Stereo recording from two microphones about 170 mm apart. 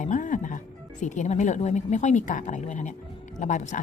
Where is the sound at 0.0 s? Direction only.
50° left (ahead or behind).